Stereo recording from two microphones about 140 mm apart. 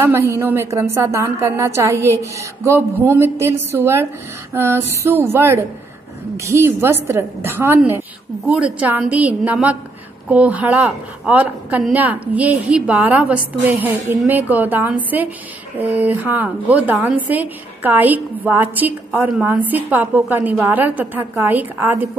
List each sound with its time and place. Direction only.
0.0 s a woman's voice: 20° right (ahead or behind)